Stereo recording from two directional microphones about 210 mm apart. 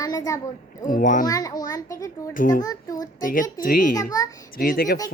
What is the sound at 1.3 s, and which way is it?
A child's voice, 15° left (ahead or behind).